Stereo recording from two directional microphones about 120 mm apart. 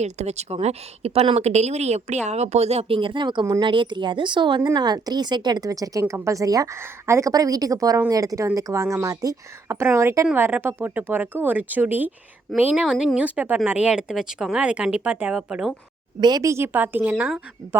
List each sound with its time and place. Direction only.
0.0 s a woman's voice: 65° right (ahead or behind); by 12.8 s 15° right (ahead or behind)
12.8 s speech: 5° right (ahead or behind)
16.2 s speech: 30° right (ahead or behind); by 17.3 s 15° right (ahead or behind)